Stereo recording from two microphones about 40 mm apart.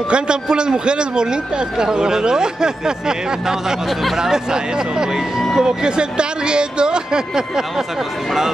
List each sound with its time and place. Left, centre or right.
0.1 s a man's voice: right